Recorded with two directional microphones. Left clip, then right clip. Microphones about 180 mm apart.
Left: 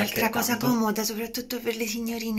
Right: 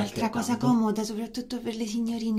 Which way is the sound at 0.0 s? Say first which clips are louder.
Left 4 dB; 15° right (ahead or behind).